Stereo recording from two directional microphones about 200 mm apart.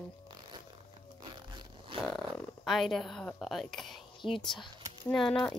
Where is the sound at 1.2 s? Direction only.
20° right (ahead or behind).